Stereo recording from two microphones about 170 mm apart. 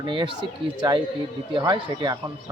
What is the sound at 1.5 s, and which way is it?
Speech, 25° right (ahead or behind).